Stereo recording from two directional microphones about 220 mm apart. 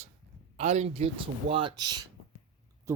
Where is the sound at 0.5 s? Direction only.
30° right (ahead or behind).